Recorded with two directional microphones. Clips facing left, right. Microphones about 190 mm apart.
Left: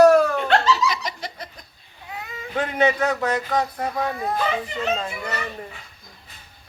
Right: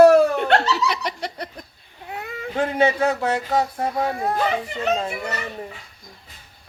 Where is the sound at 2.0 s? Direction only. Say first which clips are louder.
Right 3 dB; 55° right (ahead or behind).